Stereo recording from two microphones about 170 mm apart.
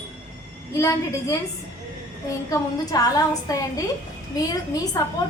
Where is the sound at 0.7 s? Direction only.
20° left (ahead or behind).